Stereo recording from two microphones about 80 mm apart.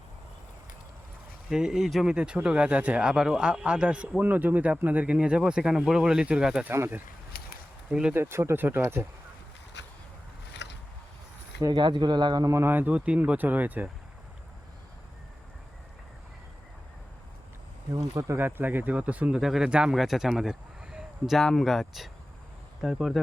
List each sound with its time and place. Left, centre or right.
1.5 s speech: centre
6.7 s speech: right
7.9 s speech: centre
8.1 s speech: right
11.7 s speech: right
12.5 s speech: right
18.1 s speech: right
18.3 s speech: right
19.4 s speech: centre
20.3 s a sound: centre
21.3 s speech: centre